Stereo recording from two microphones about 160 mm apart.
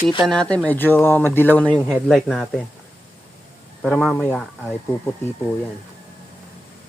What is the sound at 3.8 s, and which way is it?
Speech, centre (ahead or behind).